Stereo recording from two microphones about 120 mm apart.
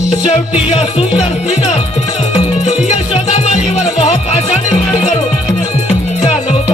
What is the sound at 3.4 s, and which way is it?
Music, 65° left (ahead or behind).